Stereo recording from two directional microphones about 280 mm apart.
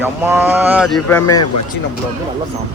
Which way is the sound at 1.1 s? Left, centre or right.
Centre.